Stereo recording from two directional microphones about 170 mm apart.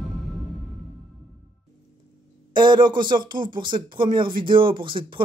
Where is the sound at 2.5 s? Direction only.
25° right (ahead or behind).